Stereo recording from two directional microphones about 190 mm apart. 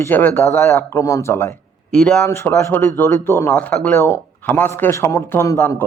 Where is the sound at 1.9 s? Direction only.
5° left (ahead or behind).